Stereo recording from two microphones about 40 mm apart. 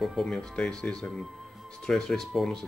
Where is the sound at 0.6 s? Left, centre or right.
Centre.